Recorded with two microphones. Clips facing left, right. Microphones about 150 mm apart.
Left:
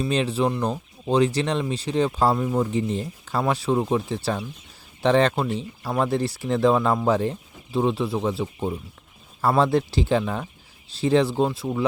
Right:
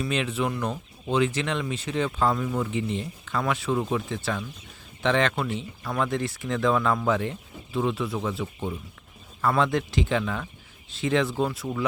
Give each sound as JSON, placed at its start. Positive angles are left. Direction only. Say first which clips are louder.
{"t": 0.0, "sound": "speech", "louder": "left 4 dB", "side_deg": 35}